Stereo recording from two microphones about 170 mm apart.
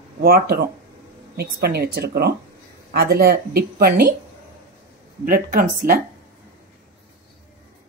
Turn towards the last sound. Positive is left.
turn(degrees=-55)  # may be behind; listen again after turning